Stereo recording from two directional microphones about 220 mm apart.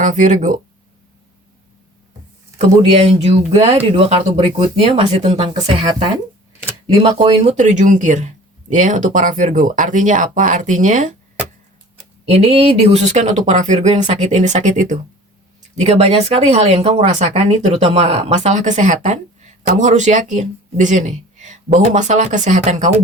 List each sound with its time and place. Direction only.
0.0 s speech: 35° right (ahead or behind)
2.6 s speech: 30° right (ahead or behind)
6.7 s speech: 20° right (ahead or behind); by 11.1 s 35° right (ahead or behind)
12.3 s speech: 30° right (ahead or behind)